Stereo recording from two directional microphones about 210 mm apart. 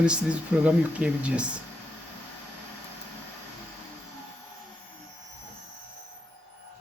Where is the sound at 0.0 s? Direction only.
5° right (ahead or behind).